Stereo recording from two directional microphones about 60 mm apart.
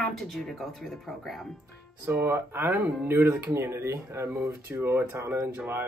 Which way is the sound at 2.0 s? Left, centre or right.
Right.